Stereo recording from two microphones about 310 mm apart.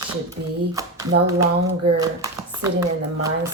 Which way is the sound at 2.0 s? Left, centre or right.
Centre.